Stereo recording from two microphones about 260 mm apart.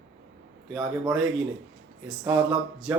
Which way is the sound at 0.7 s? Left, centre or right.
Centre.